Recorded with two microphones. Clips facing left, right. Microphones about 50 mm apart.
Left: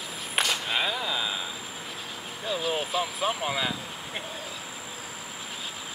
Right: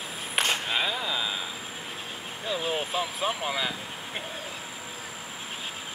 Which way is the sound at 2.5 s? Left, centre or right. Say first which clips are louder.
Left 1 dB; right.